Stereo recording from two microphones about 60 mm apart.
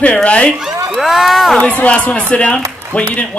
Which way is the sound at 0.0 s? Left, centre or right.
Left.